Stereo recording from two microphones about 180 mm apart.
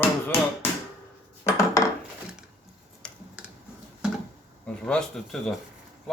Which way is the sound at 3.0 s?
5° left (ahead or behind).